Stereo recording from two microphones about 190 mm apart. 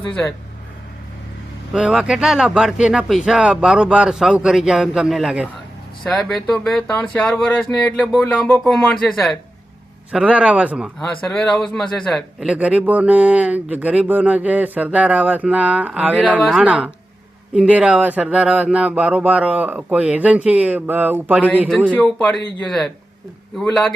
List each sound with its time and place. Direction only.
0.1 s speech: 5° left (ahead or behind)
1.7 s speech: 5° right (ahead or behind)
21.8 s speech: 10° left (ahead or behind)